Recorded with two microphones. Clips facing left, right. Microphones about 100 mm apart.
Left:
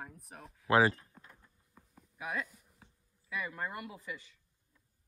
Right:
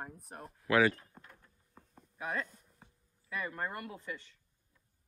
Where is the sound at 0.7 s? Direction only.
30° left (ahead or behind).